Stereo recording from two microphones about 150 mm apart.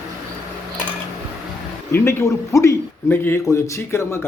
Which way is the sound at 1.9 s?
15° left (ahead or behind).